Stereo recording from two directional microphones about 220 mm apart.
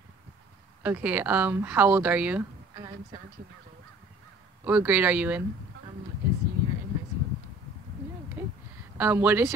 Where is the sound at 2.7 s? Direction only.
20° right (ahead or behind).